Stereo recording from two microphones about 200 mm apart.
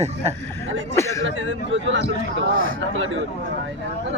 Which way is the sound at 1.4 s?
70° right (ahead or behind).